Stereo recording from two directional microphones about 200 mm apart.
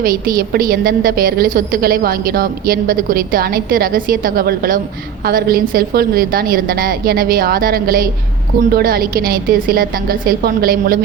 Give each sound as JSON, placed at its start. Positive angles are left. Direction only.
{"t": 0.0, "sound": "a woman's voice", "side_deg": -45}